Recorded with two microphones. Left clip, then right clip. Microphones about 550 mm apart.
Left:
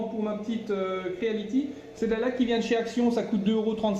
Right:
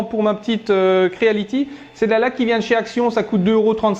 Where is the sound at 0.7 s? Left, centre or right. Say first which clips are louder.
Right 15 dB; right.